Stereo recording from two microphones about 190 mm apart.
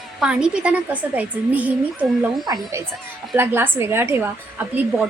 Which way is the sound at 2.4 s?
20° right (ahead or behind).